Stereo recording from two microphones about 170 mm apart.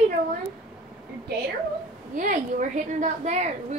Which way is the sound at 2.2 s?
50° right (ahead or behind).